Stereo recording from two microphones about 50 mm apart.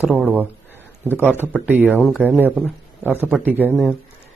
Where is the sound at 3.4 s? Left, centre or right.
Right.